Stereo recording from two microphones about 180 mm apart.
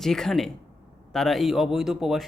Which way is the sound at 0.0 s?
Centre (ahead or behind).